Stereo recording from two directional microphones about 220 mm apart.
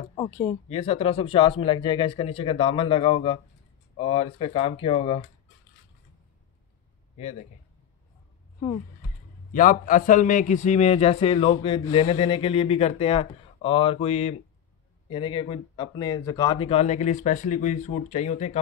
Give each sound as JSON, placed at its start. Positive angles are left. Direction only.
{"t": 0.1, "sound": "speech", "side_deg": 15}
{"t": 0.7, "sound": "a man's voice", "side_deg": 30}
{"t": 9.5, "sound": "a man's voice", "side_deg": 40}